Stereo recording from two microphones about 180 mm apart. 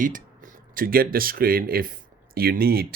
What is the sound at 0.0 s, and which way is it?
Speech, 45° right (ahead or behind).